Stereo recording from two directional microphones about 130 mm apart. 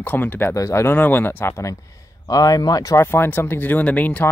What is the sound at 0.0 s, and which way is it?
Speech, 15° left (ahead or behind).